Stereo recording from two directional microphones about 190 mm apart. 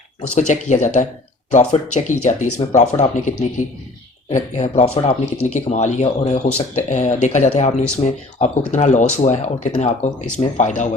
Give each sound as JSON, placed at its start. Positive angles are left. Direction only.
{"t": 0.2, "sound": "speech", "side_deg": 40}